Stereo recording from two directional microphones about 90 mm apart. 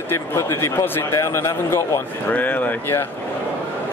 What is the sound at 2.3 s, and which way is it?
Speech, 20° left (ahead or behind).